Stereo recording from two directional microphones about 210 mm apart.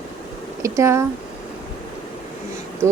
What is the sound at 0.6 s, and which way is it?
Speech, 15° right (ahead or behind).